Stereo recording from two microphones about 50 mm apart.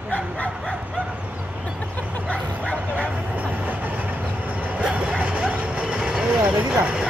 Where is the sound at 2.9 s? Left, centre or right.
Right.